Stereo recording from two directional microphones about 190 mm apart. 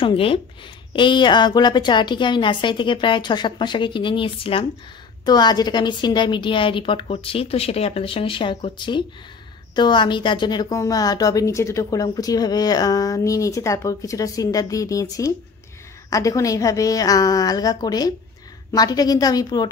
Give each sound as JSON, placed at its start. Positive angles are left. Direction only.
{"t": 0.0, "sound": "a woman's voice", "side_deg": 30}